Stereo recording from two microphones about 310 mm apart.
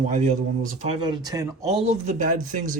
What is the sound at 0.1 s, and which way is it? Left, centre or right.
Speech, right.